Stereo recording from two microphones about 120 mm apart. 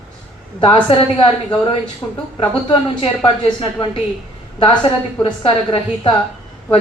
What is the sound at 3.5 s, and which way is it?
Speech, 45° left (ahead or behind).